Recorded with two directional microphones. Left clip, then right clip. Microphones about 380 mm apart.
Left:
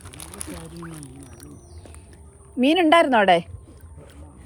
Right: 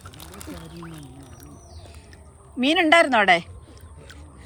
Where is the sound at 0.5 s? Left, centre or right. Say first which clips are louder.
Left 2 dB; centre.